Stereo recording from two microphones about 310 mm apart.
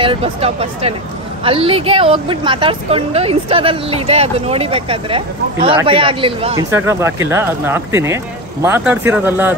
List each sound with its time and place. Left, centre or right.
0.0 s a woman's voice: centre